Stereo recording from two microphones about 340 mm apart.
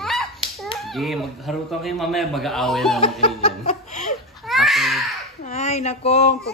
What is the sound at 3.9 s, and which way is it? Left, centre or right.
Laughter, left.